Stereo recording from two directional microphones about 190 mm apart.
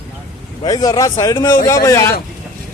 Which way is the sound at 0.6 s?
20° left (ahead or behind).